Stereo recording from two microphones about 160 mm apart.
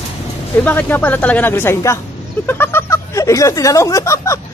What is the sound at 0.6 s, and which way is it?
A man's voice, 10° left (ahead or behind).